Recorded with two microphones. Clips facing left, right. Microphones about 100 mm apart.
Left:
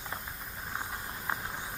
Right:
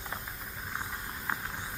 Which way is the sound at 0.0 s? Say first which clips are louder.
Even; centre (ahead or behind).